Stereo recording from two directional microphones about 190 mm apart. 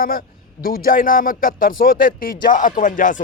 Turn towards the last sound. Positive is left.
turn(degrees=45)  # may be behind; listen again after turning